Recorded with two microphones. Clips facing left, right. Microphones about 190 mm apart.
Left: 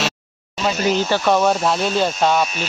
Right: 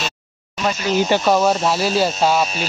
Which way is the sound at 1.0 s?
15° right (ahead or behind).